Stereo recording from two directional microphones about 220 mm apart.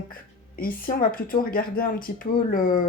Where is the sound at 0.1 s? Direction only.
40° left (ahead or behind).